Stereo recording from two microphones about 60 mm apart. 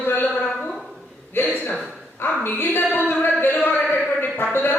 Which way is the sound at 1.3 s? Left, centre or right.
Left.